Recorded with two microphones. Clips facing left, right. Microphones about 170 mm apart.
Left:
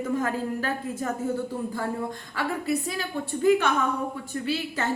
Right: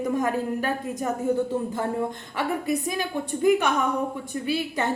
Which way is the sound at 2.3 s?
15° right (ahead or behind).